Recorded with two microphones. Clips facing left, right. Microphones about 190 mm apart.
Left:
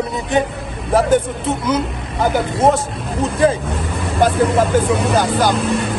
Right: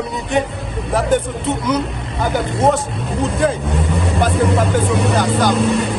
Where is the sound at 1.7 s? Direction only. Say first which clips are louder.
Even; centre (ahead or behind).